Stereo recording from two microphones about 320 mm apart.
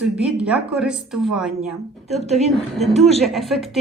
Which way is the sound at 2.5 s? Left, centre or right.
Centre.